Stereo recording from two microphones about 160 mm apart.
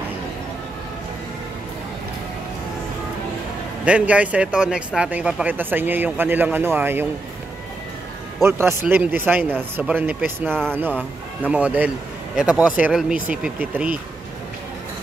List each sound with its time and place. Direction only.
3.8 s speech: 10° right (ahead or behind)
8.4 s speech: 15° right (ahead or behind)